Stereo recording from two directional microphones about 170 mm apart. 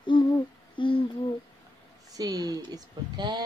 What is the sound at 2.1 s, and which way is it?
Speech, 20° right (ahead or behind).